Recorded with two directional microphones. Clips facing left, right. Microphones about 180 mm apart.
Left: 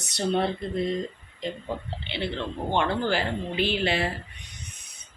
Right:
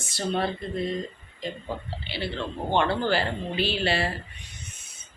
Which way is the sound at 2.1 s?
20° left (ahead or behind).